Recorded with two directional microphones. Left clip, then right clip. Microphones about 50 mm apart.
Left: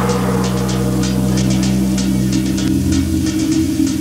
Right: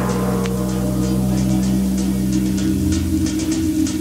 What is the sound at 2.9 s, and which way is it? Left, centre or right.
Music, right.